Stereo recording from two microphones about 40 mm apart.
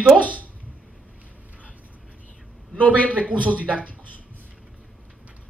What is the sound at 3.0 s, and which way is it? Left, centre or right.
Speech, right.